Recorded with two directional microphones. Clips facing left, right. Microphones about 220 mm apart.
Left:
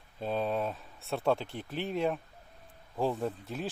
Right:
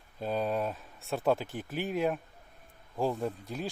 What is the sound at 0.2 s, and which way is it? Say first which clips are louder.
Speech: even; centre (ahead or behind).